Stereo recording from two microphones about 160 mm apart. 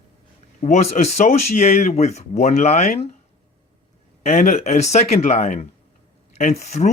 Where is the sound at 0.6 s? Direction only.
45° left (ahead or behind).